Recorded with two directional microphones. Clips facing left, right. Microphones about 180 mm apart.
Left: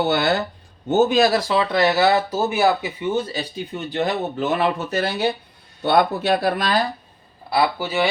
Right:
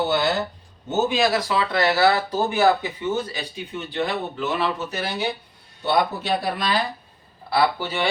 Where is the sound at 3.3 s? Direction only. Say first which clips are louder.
Left 4 dB; 35° left (ahead or behind); by 6.8 s 50° left (ahead or behind).